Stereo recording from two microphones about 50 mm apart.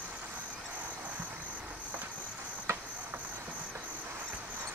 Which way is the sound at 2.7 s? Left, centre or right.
Right.